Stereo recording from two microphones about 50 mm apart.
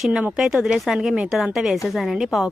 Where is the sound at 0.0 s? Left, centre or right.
Centre.